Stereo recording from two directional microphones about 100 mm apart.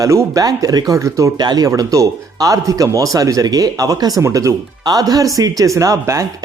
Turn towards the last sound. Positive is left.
turn(degrees=-30)  # may be behind; listen again after turning